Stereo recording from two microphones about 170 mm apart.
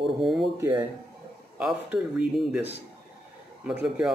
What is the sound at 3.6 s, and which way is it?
Speech, 5° right (ahead or behind).